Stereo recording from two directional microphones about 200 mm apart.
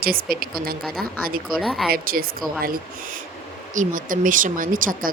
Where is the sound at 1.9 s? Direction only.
45° right (ahead or behind).